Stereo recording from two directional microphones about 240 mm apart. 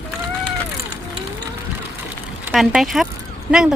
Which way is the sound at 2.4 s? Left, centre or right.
Centre.